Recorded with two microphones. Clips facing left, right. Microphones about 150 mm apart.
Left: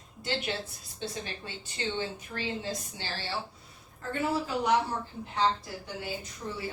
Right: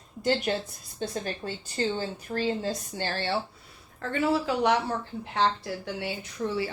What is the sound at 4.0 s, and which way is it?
Speech, 90° right.